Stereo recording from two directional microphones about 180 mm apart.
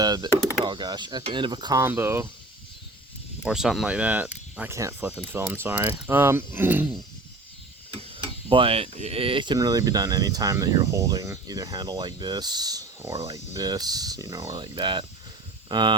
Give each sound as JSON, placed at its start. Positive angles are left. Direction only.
{"t": 0.0, "sound": "a sound", "side_deg": -20}
{"t": 0.6, "sound": "speech", "side_deg": -25}
{"t": 3.4, "sound": "speech", "side_deg": -5}
{"t": 8.2, "sound": "speech", "side_deg": -30}